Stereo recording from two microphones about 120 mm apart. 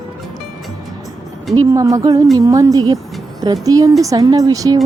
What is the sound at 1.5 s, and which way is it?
A woman's voice, 30° right (ahead or behind).